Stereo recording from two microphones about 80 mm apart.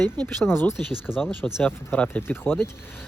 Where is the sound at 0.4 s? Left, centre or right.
Left.